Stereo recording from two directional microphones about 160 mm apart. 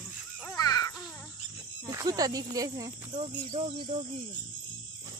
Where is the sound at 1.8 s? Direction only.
20° right (ahead or behind).